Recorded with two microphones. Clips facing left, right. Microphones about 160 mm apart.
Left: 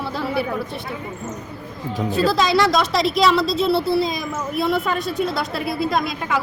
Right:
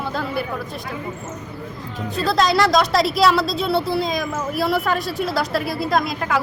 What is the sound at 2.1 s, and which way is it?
A woman's voice, centre (ahead or behind).